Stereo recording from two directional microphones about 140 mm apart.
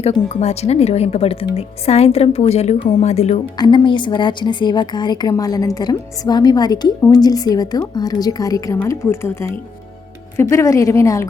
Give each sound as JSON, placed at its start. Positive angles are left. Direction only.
{"t": 0.0, "sound": "speech", "side_deg": 50}
{"t": 3.6, "sound": "a woman's voice", "side_deg": 35}
{"t": 10.5, "sound": "a woman's voice", "side_deg": 20}